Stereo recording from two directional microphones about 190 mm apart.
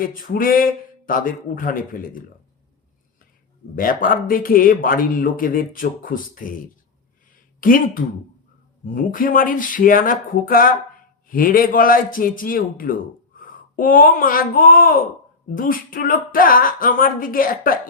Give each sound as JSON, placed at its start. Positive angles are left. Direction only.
{"t": 0.0, "sound": "a man's voice", "side_deg": 45}
{"t": 3.8, "sound": "a man's voice", "side_deg": 45}
{"t": 7.6, "sound": "a man's voice", "side_deg": 45}